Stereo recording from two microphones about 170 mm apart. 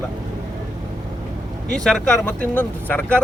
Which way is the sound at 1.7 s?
5° left (ahead or behind).